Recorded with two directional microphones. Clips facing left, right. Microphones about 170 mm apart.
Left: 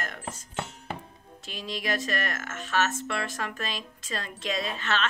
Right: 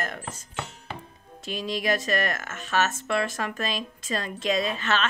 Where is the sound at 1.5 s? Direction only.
15° right (ahead or behind).